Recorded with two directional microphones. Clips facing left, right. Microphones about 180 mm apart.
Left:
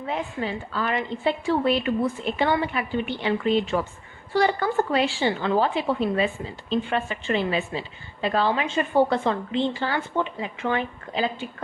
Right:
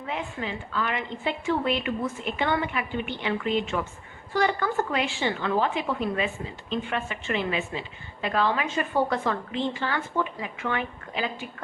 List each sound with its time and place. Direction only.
0.1 s a woman's voice: 35° left (ahead or behind)